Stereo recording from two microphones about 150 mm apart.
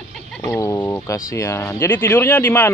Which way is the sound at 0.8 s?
15° left (ahead or behind).